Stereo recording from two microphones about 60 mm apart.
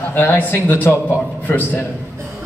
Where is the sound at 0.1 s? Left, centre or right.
Left.